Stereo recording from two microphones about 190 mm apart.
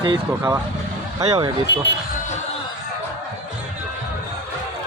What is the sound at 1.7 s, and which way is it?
Speech, 65° left (ahead or behind).